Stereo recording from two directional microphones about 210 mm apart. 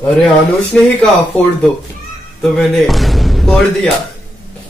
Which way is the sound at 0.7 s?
5° left (ahead or behind).